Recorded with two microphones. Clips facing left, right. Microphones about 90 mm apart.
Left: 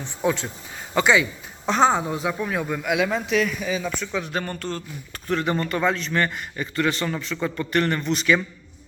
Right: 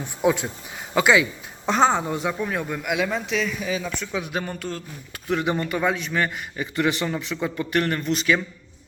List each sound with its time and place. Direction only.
0.0 s a man's voice: 10° right (ahead or behind)
6.7 s a man's voice: 15° right (ahead or behind); by 8.4 s centre (ahead or behind)